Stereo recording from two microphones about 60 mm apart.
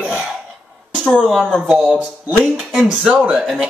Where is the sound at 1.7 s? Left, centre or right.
Right.